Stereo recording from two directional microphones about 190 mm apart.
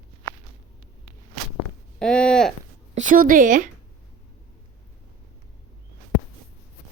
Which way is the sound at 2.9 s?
45° right (ahead or behind).